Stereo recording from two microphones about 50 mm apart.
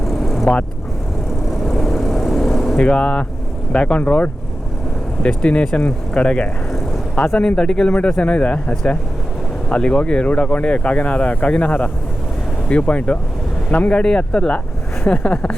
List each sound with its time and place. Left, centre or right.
0.0 s vehicle: centre
1.5 s vehicle: centre
2.7 s speech: left
8.1 s speech: left
14.0 s speech: centre